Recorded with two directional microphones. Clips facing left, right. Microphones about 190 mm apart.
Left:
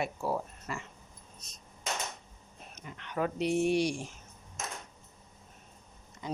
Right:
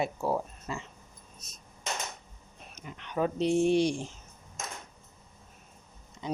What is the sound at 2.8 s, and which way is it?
Speech, 20° right (ahead or behind).